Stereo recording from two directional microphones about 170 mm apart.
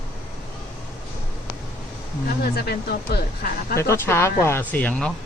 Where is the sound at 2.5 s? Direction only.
70° left (ahead or behind).